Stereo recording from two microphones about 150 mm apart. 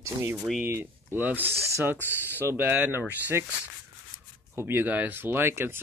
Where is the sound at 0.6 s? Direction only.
15° right (ahead or behind).